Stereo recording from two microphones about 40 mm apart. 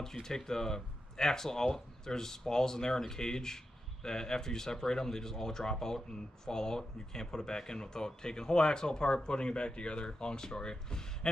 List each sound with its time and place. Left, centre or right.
0.0 s speech: centre